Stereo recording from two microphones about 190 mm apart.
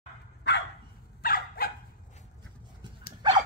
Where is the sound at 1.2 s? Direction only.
50° left (ahead or behind).